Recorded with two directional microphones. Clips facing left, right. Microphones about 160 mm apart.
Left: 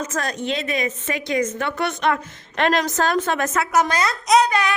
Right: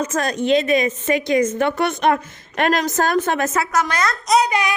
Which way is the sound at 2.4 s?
45° right (ahead or behind).